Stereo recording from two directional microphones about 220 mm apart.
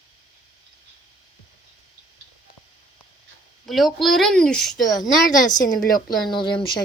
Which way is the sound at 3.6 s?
Centre (ahead or behind).